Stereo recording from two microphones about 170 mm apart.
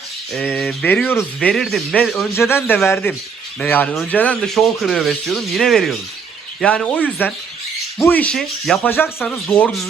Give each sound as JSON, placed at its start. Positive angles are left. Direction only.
{"t": 0.3, "sound": "speech", "side_deg": 10}
{"t": 2.3, "sound": "speech", "side_deg": 15}